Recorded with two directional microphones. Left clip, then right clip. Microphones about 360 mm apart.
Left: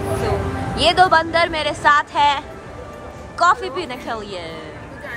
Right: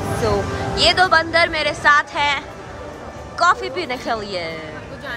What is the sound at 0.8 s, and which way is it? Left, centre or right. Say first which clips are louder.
A woman's voice: left 1 dB; centre.